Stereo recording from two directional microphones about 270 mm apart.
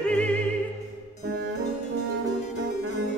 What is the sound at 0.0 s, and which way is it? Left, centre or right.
Opera, centre.